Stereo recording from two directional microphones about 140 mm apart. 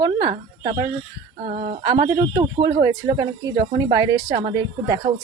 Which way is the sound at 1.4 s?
45° right (ahead or behind).